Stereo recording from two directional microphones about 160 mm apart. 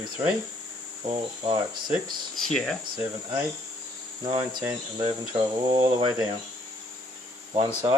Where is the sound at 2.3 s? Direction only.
Centre (ahead or behind).